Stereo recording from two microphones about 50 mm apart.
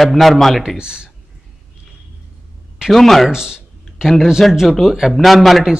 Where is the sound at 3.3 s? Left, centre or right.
Centre.